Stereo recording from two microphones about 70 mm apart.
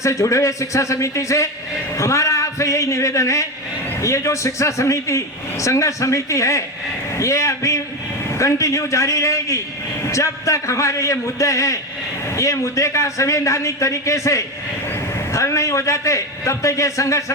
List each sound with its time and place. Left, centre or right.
0.0 s a man's voice: left